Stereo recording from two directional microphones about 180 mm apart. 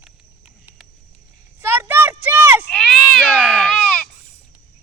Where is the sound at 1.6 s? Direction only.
10° right (ahead or behind).